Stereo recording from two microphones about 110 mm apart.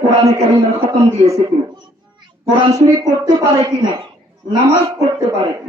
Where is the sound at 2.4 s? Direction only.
30° right (ahead or behind).